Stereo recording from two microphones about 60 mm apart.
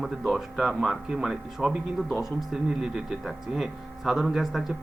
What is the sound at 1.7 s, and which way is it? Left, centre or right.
Speech, centre.